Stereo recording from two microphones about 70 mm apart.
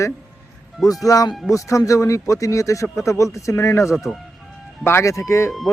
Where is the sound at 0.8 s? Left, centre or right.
Left.